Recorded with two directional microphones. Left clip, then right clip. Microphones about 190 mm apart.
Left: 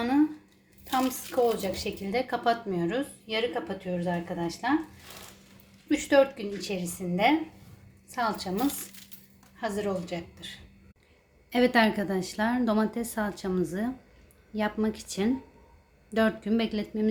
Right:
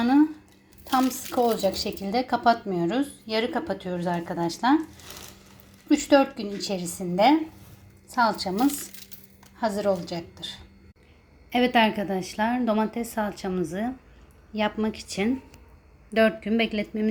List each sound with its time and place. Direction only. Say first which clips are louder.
0.9 s speech: right 4 dB; 20° right (ahead or behind)
5.9 s speech: right 2 dB; 20° right (ahead or behind)
9.6 s speech: right 6 dB; 25° right (ahead or behind)
11.5 s a woman's voice: right 2 dB; centre (ahead or behind)